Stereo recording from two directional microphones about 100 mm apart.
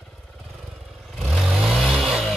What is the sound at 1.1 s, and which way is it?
Vehicle, 5° right (ahead or behind).